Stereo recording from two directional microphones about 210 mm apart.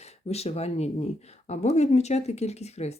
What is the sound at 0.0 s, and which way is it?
Speech, 30° left (ahead or behind).